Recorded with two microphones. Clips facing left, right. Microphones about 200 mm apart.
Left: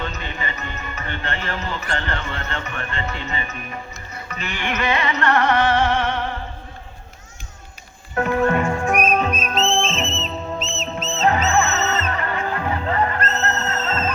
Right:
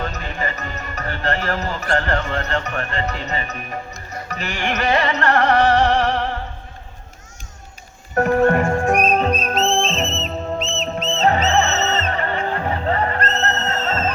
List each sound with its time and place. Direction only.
0.0 s music: 40° right (ahead or behind)
8.1 s music: 45° right (ahead or behind)
10.6 s music: 5° left (ahead or behind)
11.1 s music: 30° right (ahead or behind)